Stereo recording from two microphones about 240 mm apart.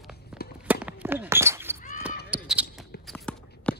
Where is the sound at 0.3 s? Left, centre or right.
Centre.